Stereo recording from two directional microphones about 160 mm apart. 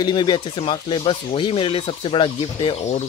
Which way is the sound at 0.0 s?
25° left (ahead or behind).